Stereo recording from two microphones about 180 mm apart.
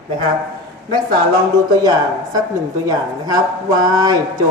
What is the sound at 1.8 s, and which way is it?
Speech, 20° right (ahead or behind).